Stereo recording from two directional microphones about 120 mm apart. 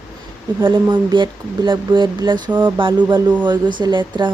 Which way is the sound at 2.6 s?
40° right (ahead or behind).